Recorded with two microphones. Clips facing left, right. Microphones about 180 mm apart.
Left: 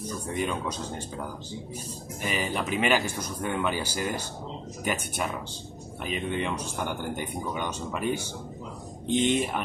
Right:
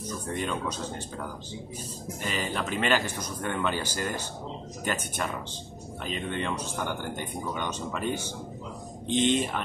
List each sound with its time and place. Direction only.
0.4 s a man's voice: 10° left (ahead or behind)
2.2 s a man's voice: 10° left (ahead or behind)
9.2 s a man's voice: 10° left (ahead or behind)